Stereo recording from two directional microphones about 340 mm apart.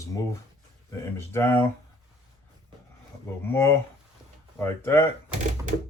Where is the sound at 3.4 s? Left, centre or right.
Centre.